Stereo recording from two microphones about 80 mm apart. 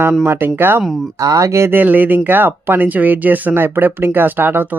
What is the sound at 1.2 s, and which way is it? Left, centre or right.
Speech, right.